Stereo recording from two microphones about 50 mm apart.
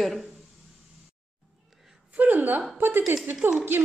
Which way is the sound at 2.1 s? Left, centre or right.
Right.